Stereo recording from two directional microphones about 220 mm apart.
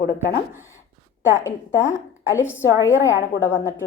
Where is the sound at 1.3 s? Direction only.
15° left (ahead or behind).